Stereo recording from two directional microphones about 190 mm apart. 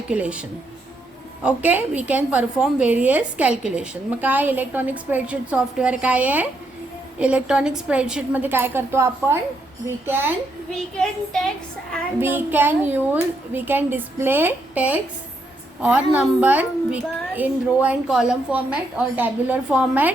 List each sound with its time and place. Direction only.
0.1 s a woman's voice: 5° right (ahead or behind)
1.5 s a woman's voice: 5° right (ahead or behind)
10.8 s child singing: 5° left (ahead or behind)
12.2 s a woman's voice: 10° right (ahead or behind)